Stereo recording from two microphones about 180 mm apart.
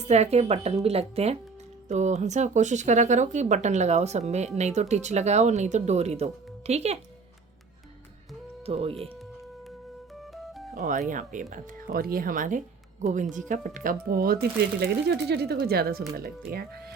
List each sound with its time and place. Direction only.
0.0 s speech: 40° right (ahead or behind)
8.6 s speech: 30° right (ahead or behind)
10.3 s music: centre (ahead or behind)
10.8 s speech: 45° right (ahead or behind)
14.8 s speech: 65° right (ahead or behind)